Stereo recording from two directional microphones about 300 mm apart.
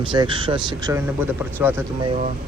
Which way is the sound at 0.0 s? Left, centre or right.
Centre.